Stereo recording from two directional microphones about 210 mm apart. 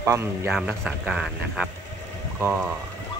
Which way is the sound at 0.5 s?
Centre (ahead or behind).